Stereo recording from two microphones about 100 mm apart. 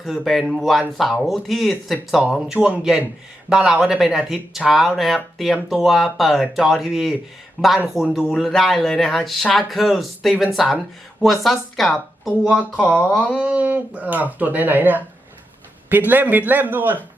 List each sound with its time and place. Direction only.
0.0 s speech: centre (ahead or behind)
2.6 s speech: 10° right (ahead or behind)
7.6 s speech: 10° left (ahead or behind)
7.9 s speech: centre (ahead or behind)
12.5 s speech: 10° left (ahead or behind)
13.4 s speech: 15° right (ahead or behind)